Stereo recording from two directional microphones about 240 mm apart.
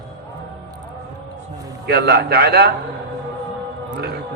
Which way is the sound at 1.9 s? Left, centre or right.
Right.